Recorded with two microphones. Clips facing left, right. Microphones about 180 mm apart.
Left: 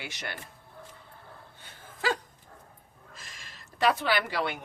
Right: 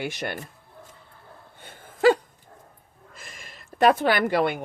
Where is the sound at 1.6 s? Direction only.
55° right (ahead or behind).